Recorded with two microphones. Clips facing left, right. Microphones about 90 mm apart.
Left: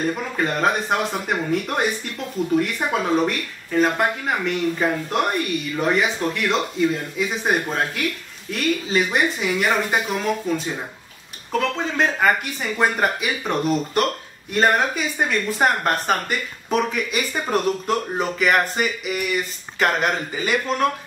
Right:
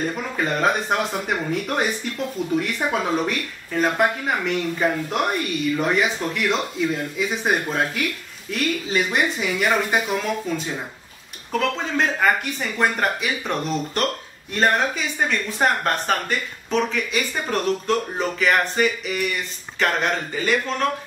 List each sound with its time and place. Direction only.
0.1 s speech: centre (ahead or behind)
11.5 s speech: centre (ahead or behind)